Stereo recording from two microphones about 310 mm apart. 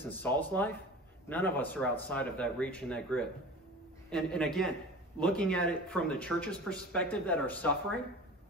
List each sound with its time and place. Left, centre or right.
0.1 s speech: centre